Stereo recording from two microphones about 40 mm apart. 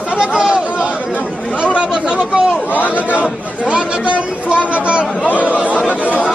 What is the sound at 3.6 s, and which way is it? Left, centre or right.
Speech, right.